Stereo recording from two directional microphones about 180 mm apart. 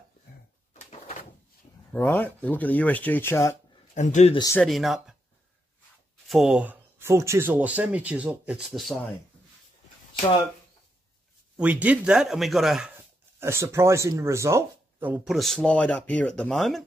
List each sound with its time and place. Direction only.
0.7 s door: 35° left (ahead or behind)
1.9 s speech: 10° left (ahead or behind)
3.9 s speech: 40° left (ahead or behind)
4.6 s speech: centre (ahead or behind)
6.2 s speech: centre (ahead or behind)
11.5 s speech: 10° right (ahead or behind)
15.3 s speech: centre (ahead or behind)